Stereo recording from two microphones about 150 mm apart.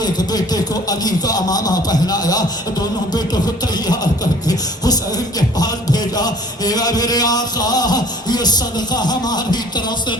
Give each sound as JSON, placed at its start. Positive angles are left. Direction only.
{"t": 0.0, "sound": "a man's voice", "side_deg": 25}
{"t": 4.4, "sound": "music", "side_deg": 25}